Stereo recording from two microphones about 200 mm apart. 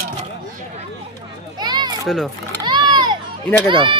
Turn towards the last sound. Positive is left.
turn(degrees=-25)  # may be behind; listen again after turning